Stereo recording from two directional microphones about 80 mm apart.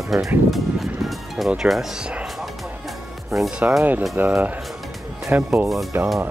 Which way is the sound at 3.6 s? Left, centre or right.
Right.